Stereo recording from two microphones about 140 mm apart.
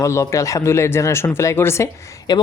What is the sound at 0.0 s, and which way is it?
A woman's voice, 20° left (ahead or behind).